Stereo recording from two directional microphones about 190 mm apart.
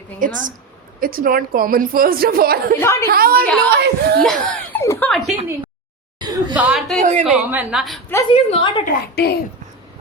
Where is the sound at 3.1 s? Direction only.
50° right (ahead or behind).